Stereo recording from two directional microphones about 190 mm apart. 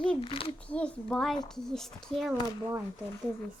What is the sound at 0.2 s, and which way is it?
Speech, 30° left (ahead or behind).